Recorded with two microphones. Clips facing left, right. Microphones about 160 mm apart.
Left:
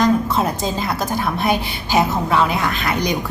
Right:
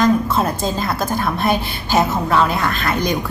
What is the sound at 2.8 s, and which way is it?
Speech, 15° left (ahead or behind).